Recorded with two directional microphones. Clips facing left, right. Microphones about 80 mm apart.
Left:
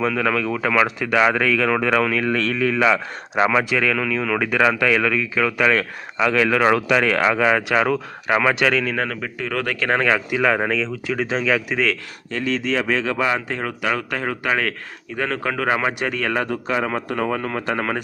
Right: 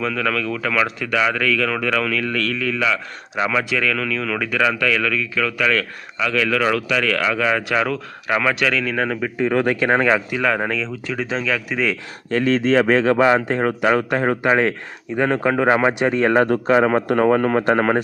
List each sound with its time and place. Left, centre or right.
0.0 s a man's voice: centre; by 3.5 s left
3.5 s a man's voice: centre
8.9 s speech: centre
9.4 s speech: right
10.2 s speech: centre
12.3 s a man's voice: right